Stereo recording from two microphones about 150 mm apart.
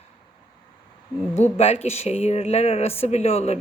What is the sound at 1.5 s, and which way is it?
A woman's voice, 45° left (ahead or behind).